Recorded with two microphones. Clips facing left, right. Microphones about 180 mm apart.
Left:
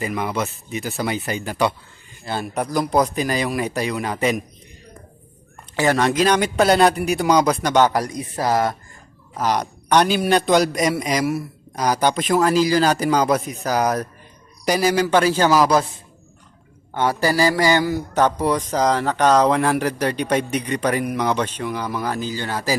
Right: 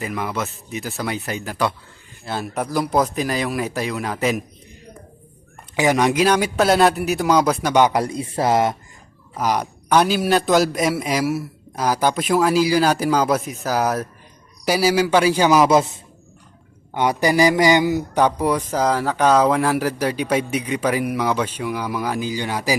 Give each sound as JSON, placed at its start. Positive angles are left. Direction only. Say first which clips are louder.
{"t": 0.0, "sound": "a man's voice", "louder": "left 2 dB", "side_deg": 0}
{"t": 5.7, "sound": "a man's voice", "louder": "right 1 dB", "side_deg": -15}
{"t": 7.9, "sound": "speech", "louder": "right 2 dB", "side_deg": -25}
{"t": 9.3, "sound": "a man's voice", "louder": "even", "side_deg": -10}